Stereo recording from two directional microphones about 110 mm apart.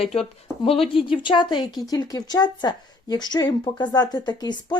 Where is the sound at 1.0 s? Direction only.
50° left (ahead or behind).